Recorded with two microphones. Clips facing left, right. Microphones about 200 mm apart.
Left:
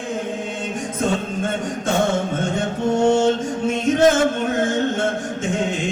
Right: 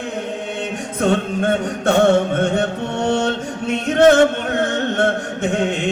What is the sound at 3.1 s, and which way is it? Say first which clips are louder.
Chant: left 2 dB; 65° right (ahead or behind).